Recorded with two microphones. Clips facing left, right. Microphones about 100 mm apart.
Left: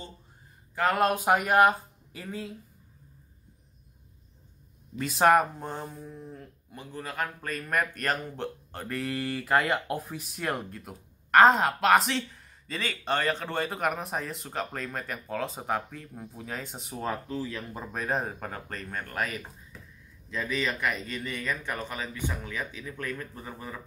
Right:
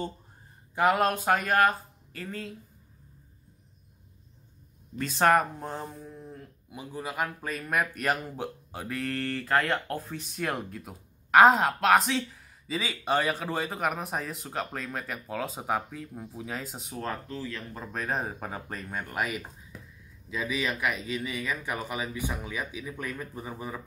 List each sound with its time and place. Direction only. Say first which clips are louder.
0.8 s speech: right 3 dB; 20° right (ahead or behind)
1.1 s speech: left 2 dB; 15° left (ahead or behind)
4.9 s speech: left 1 dB; 5° left (ahead or behind); by 23.8 s 10° right (ahead or behind)